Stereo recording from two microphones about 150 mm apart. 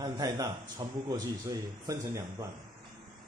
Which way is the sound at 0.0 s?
25° right (ahead or behind).